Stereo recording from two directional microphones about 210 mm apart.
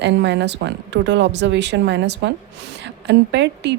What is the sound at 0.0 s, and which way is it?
Speech, 55° right (ahead or behind).